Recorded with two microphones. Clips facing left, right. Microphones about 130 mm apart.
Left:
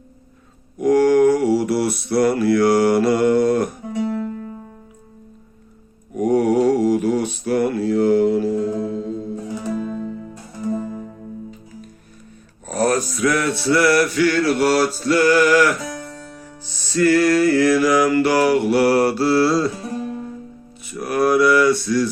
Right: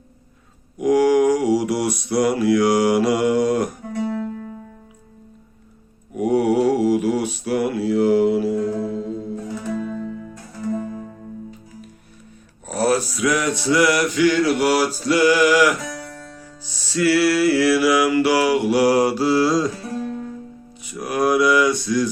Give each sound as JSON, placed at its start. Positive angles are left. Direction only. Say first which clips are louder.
{"t": 0.8, "sound": "mantra", "louder": "left 2 dB", "side_deg": -10}
{"t": 6.1, "sound": "mantra", "louder": "left 1 dB", "side_deg": -10}
{"t": 8.5, "sound": "music", "louder": "left 1 dB", "side_deg": 20}
{"t": 12.6, "sound": "a sound", "louder": "even", "side_deg": -5}
{"t": 16.9, "sound": "mantra", "louder": "left 2 dB", "side_deg": -10}
{"t": 20.8, "sound": "mantra", "louder": "left 2 dB", "side_deg": -15}